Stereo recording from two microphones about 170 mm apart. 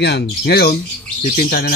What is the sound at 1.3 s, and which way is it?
Speech, 55° left (ahead or behind).